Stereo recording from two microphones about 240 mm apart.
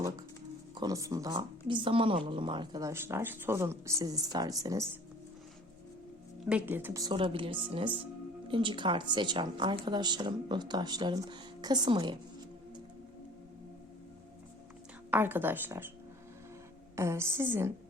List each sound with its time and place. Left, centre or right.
0.8 s speech: centre
6.5 s speech: centre
15.1 s speech: centre
16.9 s speech: centre